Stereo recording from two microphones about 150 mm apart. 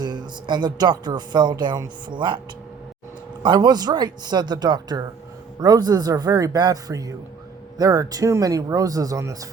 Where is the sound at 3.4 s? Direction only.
30° right (ahead or behind).